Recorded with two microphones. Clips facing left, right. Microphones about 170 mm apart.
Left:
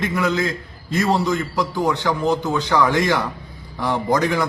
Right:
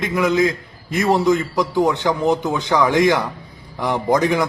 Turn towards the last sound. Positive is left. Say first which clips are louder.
# right 2 dB
turn(degrees=-20)  # may be behind; listen again after turning